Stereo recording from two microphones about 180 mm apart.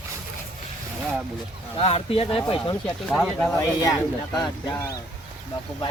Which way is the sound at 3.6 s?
20° left (ahead or behind).